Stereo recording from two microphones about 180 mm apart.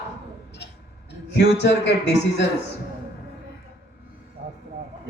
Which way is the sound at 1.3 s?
70° left (ahead or behind).